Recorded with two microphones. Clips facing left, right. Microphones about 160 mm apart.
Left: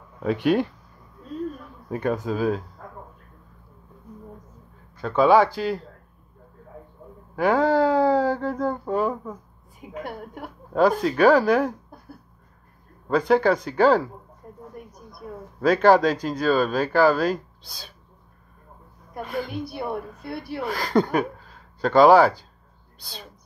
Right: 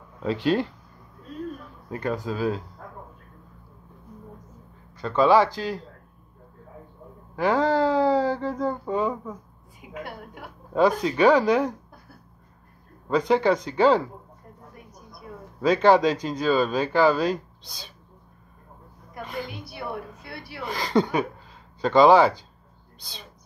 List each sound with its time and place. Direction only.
0.2 s speech: 15° left (ahead or behind)
1.9 s speech: 20° left (ahead or behind)
5.0 s speech: 10° left (ahead or behind)
7.3 s speech: 10° left (ahead or behind)
9.8 s a woman's voice: 45° left (ahead or behind)
10.7 s speech: centre (ahead or behind)
13.3 s speech: 5° left (ahead or behind)
15.6 s speech: 5° left (ahead or behind)
19.2 s speech: centre (ahead or behind)